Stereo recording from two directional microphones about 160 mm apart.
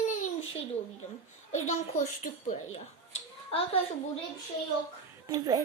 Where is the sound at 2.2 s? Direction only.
50° left (ahead or behind).